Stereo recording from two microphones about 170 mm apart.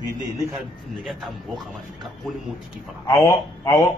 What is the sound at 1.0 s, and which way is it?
A man's voice, centre (ahead or behind).